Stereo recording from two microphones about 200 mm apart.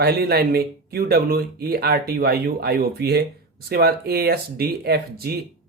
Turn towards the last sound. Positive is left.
turn(degrees=-50)  # may be behind; listen again after turning